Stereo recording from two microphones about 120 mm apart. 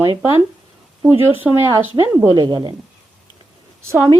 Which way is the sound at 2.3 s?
35° right (ahead or behind).